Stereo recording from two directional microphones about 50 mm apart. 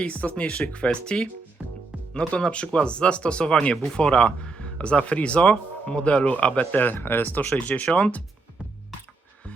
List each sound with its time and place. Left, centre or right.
0.0 s speech: left
0.9 s speech: centre; by 7.3 s left
7.3 s speech: left